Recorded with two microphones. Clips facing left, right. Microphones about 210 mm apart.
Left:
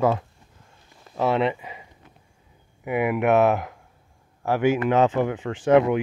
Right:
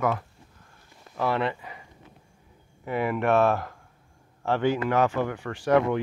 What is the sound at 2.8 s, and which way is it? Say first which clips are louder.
Speech: left 4 dB; 15° left (ahead or behind).